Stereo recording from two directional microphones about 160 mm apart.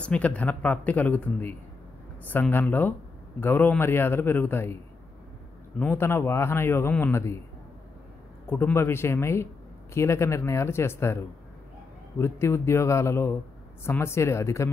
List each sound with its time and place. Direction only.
0.0 s speech: 10° left (ahead or behind)
5.8 s speech: 15° left (ahead or behind)
8.5 s speech: 15° left (ahead or behind)